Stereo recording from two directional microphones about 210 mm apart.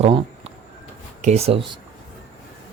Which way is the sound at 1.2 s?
30° right (ahead or behind).